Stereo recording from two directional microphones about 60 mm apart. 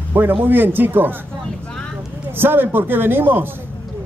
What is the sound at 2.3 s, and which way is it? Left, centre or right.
A man's voice, right.